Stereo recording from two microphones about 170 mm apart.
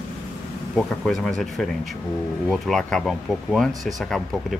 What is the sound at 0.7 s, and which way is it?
Speech, centre (ahead or behind).